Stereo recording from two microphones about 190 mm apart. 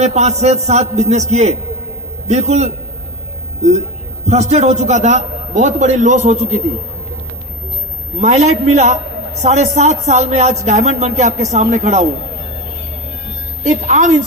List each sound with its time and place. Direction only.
0.0 s speech: 35° right (ahead or behind)
4.3 s speech: 35° right (ahead or behind)
8.2 s speech: 35° right (ahead or behind)
13.7 s speech: 40° right (ahead or behind)